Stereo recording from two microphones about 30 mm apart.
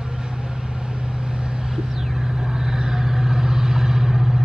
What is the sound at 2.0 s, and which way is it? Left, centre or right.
Vehicle, centre.